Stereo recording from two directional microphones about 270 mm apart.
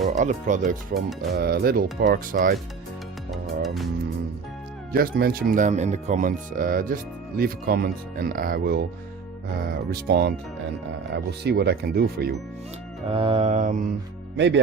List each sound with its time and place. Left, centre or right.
0.0 s speech: right
3.4 s music: centre
4.9 s speech: right
9.9 s speech: right
13.1 s mantra: centre
14.3 s speech: right